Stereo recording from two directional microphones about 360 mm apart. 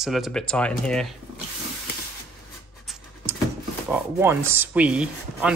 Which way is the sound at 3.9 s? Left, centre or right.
Centre.